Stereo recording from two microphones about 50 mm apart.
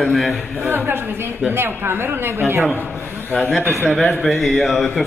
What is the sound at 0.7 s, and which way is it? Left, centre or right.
A man's voice, right.